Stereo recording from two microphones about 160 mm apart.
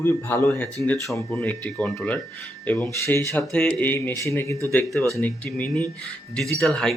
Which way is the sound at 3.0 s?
20° left (ahead or behind).